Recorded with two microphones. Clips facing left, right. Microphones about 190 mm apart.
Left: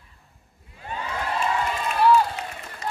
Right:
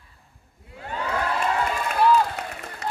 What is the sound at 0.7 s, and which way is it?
Crowd, 65° right (ahead or behind).